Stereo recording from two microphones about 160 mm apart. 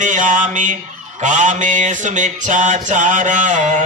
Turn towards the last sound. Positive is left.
turn(degrees=-55)  # may be behind; listen again after turning